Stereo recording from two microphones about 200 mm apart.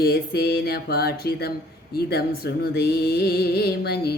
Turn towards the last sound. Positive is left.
turn(degrees=55)  # may be behind; listen again after turning